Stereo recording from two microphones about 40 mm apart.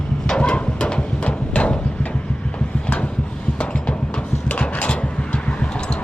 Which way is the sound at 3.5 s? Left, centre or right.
Left.